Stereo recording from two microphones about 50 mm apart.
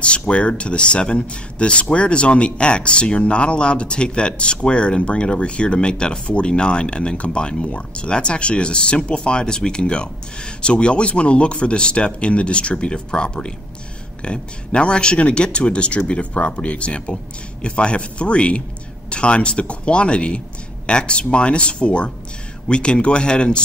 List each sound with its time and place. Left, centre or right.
0.3 s speech: left